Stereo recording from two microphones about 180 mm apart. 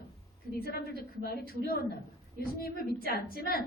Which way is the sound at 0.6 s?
55° left (ahead or behind).